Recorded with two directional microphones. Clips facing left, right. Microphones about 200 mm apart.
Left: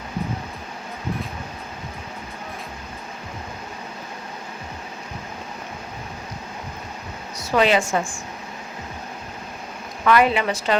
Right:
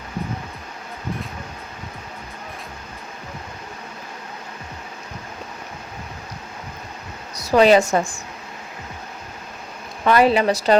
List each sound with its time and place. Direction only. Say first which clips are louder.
7.3 s a woman's voice: right 5 dB; 35° right (ahead or behind)
10.0 s a woman's voice: right 2 dB; 35° right (ahead or behind)